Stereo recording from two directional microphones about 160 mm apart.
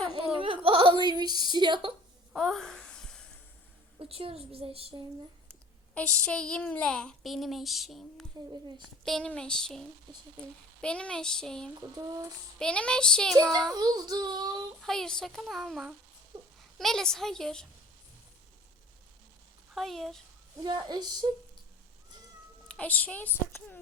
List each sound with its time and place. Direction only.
0.3 s a sound: 35° right (ahead or behind)
2.3 s a sound: centre (ahead or behind)
3.9 s a woman's voice: 35° right (ahead or behind)
5.9 s speech: 5° left (ahead or behind)
11.7 s child singing: 20° right (ahead or behind)
12.5 s speech: 5° left (ahead or behind)
13.7 s child singing: 25° right (ahead or behind)
14.8 s speech: 5° left (ahead or behind)
19.7 s speech: centre (ahead or behind)
20.6 s child singing: 30° right (ahead or behind)
22.7 s a woman's voice: 10° left (ahead or behind)